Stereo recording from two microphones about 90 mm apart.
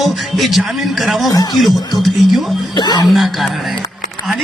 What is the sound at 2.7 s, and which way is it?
Speech, 50° left (ahead or behind).